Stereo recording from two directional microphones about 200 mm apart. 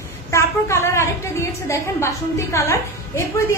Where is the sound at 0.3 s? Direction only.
15° left (ahead or behind).